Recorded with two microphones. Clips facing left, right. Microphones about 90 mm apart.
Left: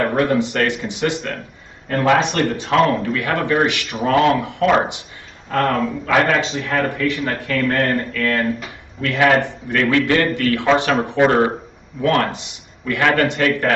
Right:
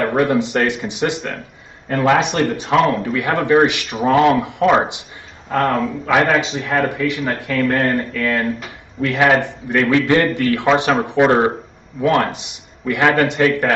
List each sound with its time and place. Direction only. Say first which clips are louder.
0.1 s speech: right 1 dB; 15° right (ahead or behind)
5.5 s speech: right 1 dB; centre (ahead or behind)
6.0 s speech: right 1 dB; 15° right (ahead or behind)
6.3 s speech: right 2 dB; centre (ahead or behind)
6.6 s speech: right 1 dB; 15° right (ahead or behind)
9.2 s speech: even; 20° right (ahead or behind)